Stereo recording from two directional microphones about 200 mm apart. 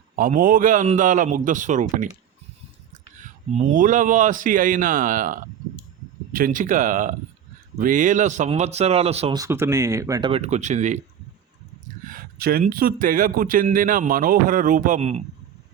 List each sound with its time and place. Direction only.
0.2 s speech: 45° right (ahead or behind)
3.2 s speech: 40° right (ahead or behind)
9.4 s speech: 15° right (ahead or behind); by 11.0 s 35° right (ahead or behind)
12.0 s speech: 45° right (ahead or behind)